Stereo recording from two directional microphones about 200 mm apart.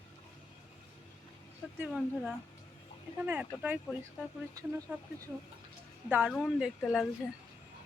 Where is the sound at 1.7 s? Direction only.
5° right (ahead or behind).